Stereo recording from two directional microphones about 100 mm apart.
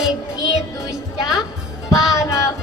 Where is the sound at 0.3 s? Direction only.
40° left (ahead or behind).